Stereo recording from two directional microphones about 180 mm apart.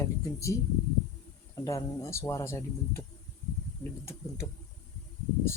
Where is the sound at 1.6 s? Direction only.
15° left (ahead or behind).